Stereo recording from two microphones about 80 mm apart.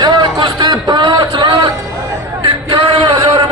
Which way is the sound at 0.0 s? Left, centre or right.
Right.